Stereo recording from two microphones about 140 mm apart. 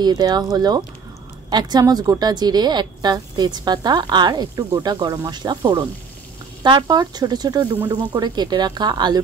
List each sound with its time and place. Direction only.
0.0 s speech: 30° right (ahead or behind)
6.6 s speech: 30° right (ahead or behind)